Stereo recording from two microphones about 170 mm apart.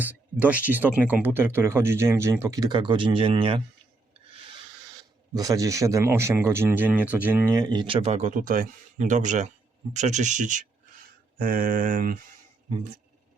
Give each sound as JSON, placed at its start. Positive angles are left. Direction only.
{"t": 0.0, "sound": "speech", "side_deg": -10}
{"t": 4.4, "sound": "a sound", "side_deg": -30}
{"t": 5.3, "sound": "speech", "side_deg": -20}
{"t": 11.3, "sound": "mantra", "side_deg": -55}